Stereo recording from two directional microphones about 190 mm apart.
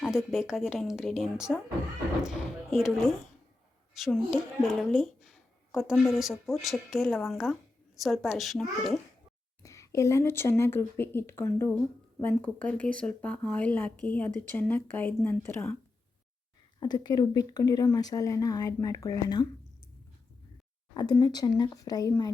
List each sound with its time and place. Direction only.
0.0 s speech: 5° right (ahead or behind)
9.6 s speech: 15° left (ahead or behind)
16.8 s speech: 20° left (ahead or behind)
20.9 s speech: 20° left (ahead or behind)